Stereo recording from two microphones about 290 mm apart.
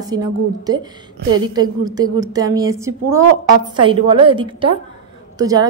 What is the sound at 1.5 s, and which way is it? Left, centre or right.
A woman's voice, centre.